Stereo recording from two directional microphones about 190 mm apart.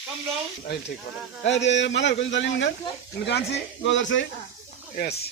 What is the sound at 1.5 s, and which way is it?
Speech, 70° left (ahead or behind).